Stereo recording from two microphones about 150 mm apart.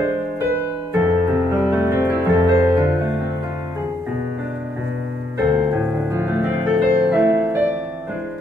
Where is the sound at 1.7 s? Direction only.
15° right (ahead or behind).